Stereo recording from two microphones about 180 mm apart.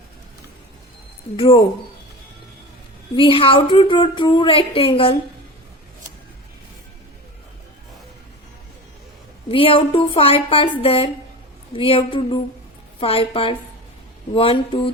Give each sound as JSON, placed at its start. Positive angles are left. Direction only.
{"t": 1.4, "sound": "speech", "side_deg": 30}
{"t": 3.2, "sound": "speech", "side_deg": 30}
{"t": 9.5, "sound": "speech", "side_deg": 30}